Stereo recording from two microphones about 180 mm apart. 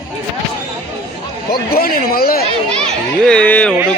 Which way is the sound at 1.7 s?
55° left (ahead or behind).